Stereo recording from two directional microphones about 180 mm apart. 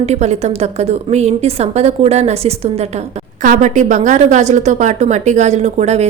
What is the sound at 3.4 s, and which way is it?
A woman's voice, 45° right (ahead or behind).